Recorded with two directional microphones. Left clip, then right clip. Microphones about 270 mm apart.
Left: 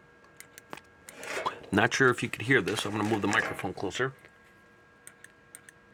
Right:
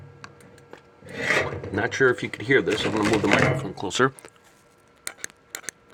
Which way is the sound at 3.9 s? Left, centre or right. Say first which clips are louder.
Right 14 dB; right.